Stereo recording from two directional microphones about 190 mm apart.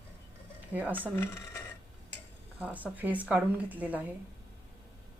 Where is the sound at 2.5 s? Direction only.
10° right (ahead or behind).